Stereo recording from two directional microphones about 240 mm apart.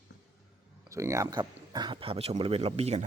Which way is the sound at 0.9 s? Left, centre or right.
Centre.